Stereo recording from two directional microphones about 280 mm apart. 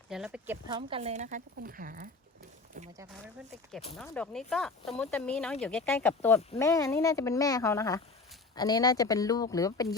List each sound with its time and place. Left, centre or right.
0.1 s speech: centre
0.8 s speech: centre
3.9 s speech: centre